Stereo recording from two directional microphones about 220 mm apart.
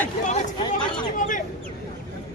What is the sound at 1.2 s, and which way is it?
Speech, 35° left (ahead or behind).